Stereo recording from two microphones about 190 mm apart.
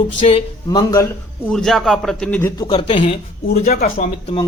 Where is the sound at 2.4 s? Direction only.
15° left (ahead or behind).